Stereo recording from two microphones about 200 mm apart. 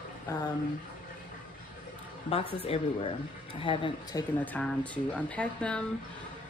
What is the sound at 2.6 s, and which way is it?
Speech, 30° left (ahead or behind).